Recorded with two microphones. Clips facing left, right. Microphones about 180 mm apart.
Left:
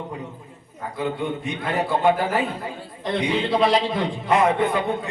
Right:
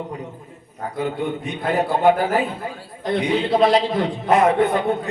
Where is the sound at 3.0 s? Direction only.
Centre (ahead or behind).